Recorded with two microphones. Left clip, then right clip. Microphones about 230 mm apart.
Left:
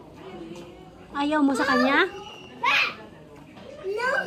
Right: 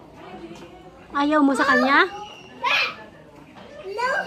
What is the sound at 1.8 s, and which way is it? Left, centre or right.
Speech, centre.